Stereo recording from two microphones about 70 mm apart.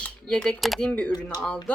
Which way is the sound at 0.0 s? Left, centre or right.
Centre.